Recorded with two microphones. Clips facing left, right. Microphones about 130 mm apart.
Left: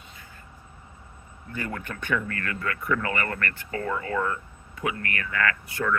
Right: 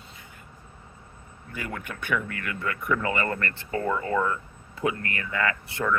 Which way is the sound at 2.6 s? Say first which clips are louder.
Right 1 dB; 20° right (ahead or behind).